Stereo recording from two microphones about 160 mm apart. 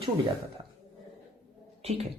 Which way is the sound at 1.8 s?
40° right (ahead or behind).